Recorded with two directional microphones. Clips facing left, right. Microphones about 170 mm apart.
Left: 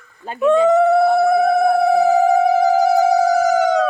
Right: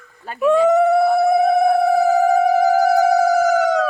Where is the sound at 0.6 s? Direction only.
Centre (ahead or behind).